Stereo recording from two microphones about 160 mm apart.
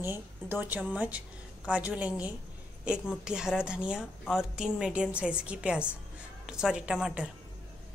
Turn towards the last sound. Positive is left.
turn(degrees=-5)  # may be behind; listen again after turning